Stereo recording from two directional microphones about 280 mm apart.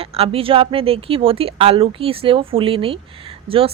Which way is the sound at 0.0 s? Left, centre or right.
Centre.